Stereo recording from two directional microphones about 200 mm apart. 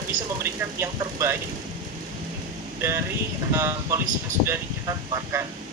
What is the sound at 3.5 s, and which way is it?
Speech, 15° right (ahead or behind).